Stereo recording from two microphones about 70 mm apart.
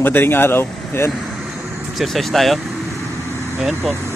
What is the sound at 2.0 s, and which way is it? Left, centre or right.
Speech, centre.